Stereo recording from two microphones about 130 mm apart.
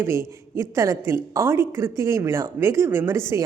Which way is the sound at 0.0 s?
20° right (ahead or behind).